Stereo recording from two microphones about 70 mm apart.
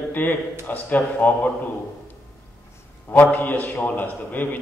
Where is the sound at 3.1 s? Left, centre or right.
Left.